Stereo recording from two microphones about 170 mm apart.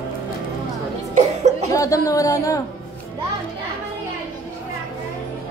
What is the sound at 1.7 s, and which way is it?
Speech, 20° left (ahead or behind).